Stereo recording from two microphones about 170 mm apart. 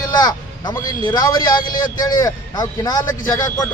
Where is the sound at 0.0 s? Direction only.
25° left (ahead or behind).